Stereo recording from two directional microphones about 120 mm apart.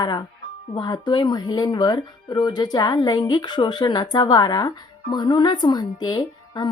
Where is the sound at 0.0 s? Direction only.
35° left (ahead or behind).